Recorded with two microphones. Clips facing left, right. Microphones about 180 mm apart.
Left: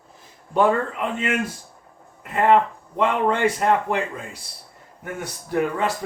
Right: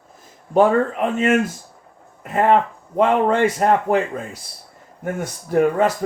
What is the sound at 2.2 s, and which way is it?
Speech, 45° right (ahead or behind).